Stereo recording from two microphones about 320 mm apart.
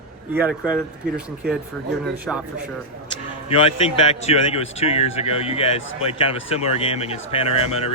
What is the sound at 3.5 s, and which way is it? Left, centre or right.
A man's voice, centre.